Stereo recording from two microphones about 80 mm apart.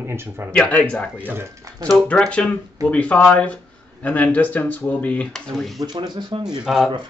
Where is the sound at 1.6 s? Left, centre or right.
Right.